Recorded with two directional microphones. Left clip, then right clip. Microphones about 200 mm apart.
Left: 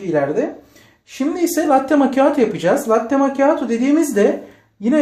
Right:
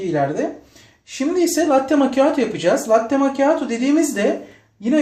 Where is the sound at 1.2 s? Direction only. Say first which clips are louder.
Even; 35° left (ahead or behind).